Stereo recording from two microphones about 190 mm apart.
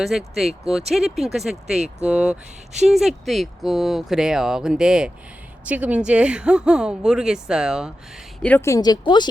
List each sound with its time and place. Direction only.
0.0 s speech: centre (ahead or behind)
8.4 s speech: 10° left (ahead or behind)